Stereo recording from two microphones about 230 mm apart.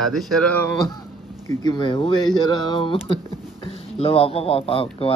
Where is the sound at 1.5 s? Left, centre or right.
Centre.